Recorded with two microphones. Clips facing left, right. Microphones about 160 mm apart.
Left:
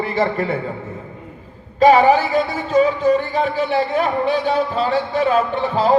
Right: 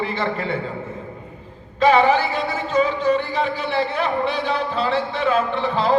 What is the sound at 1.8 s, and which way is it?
Music, 40° left (ahead or behind).